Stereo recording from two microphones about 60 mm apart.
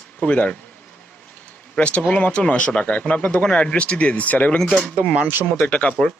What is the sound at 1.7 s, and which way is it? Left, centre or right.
Speech, centre.